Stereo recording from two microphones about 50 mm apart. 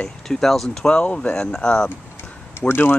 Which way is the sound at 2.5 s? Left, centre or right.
Left.